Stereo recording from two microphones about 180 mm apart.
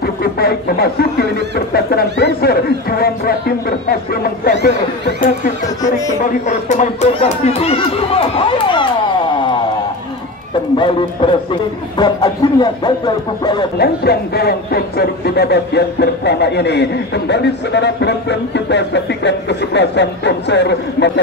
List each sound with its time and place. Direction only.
0.0 s speech: 60° left (ahead or behind)
6.4 s speech: 40° left (ahead or behind)
10.8 s speech: 25° left (ahead or behind)
13.7 s speech: 60° left (ahead or behind)